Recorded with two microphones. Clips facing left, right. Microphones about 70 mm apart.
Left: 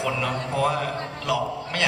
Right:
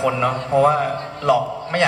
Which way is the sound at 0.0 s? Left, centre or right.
Right.